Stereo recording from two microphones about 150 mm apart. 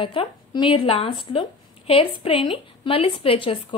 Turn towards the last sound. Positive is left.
turn(degrees=35)  # may be behind; listen again after turning